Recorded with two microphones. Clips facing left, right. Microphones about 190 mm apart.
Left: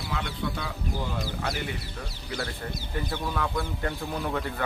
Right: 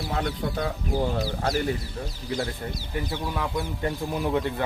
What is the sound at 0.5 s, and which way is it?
Speech, 45° right (ahead or behind).